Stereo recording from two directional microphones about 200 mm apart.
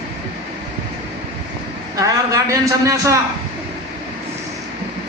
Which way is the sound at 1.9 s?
15° right (ahead or behind).